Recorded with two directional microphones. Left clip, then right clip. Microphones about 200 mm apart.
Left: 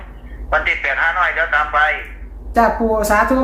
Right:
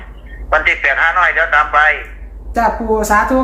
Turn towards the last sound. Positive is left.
turn(degrees=5)  # may be behind; listen again after turning